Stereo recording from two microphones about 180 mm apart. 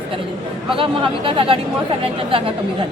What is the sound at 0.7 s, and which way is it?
Speech, 30° right (ahead or behind).